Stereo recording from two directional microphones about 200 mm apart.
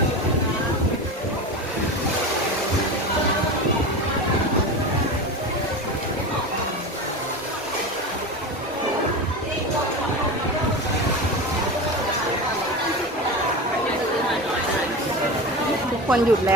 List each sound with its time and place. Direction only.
16.0 s speech: 5° right (ahead or behind)